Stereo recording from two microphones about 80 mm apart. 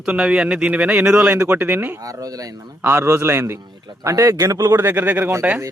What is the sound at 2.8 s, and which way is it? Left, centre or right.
Speech, right.